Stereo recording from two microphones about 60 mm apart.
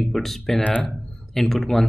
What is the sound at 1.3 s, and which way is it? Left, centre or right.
Speech, centre.